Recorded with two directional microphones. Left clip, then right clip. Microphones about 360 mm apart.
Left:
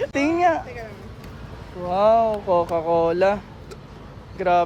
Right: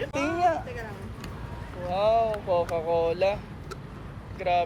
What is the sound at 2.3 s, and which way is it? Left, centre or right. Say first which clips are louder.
Speech: left 6 dB; left.